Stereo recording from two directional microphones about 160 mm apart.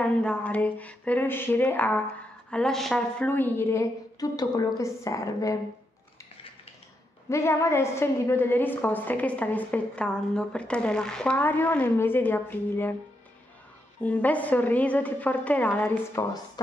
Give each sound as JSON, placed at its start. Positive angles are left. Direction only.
{"t": 0.0, "sound": "a woman's voice", "side_deg": 5}
{"t": 3.3, "sound": "a woman's voice", "side_deg": 10}
{"t": 7.2, "sound": "a woman's voice", "side_deg": 15}
{"t": 14.0, "sound": "a woman's voice", "side_deg": 10}
{"t": 16.2, "sound": "a woman's voice", "side_deg": 20}